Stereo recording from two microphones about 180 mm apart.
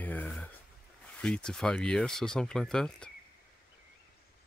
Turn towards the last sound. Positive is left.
turn(degrees=5)  # may be behind; listen again after turning